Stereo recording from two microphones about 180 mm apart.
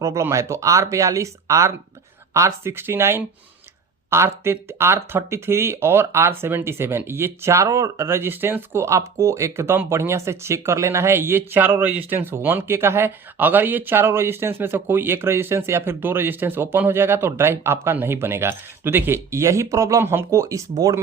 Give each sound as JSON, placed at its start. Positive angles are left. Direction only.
{"t": 0.0, "sound": "speech", "side_deg": -15}